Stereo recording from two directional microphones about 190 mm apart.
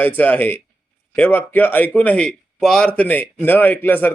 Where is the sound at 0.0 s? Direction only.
10° left (ahead or behind).